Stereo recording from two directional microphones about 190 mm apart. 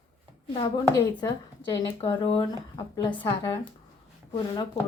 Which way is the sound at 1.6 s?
30° left (ahead or behind).